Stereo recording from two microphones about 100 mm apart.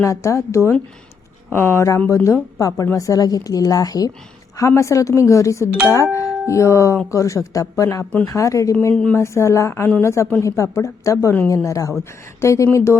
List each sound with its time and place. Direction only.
0.0 s a woman's voice: 30° left (ahead or behind)